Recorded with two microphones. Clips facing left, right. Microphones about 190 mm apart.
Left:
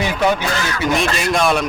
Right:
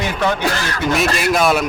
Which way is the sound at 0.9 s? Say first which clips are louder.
Right 2 dB; 5° right (ahead or behind).